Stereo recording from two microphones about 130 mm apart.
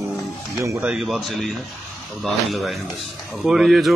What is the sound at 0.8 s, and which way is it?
Speech, 5° right (ahead or behind).